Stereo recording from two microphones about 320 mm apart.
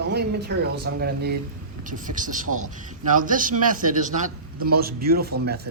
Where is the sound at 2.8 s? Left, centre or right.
Right.